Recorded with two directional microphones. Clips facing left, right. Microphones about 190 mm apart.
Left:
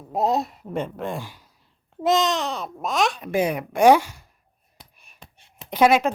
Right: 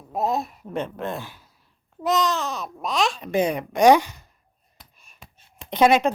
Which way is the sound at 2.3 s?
70° left (ahead or behind).